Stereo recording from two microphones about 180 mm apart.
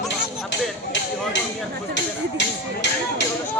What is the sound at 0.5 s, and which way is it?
Speech, 85° left.